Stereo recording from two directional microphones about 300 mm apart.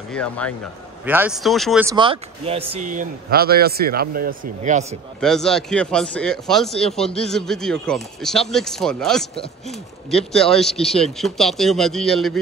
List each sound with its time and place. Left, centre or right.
0.1 s speech: centre
1.0 s speech: centre; by 4.8 s right
5.2 s speech: centre